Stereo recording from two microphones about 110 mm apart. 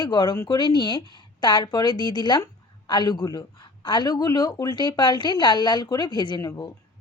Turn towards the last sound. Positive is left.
turn(degrees=30)  # may be behind; listen again after turning